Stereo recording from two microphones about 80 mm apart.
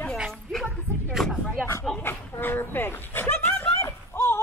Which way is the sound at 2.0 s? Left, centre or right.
Left.